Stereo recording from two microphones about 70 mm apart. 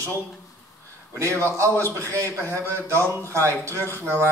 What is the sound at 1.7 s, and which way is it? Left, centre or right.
Speech, right.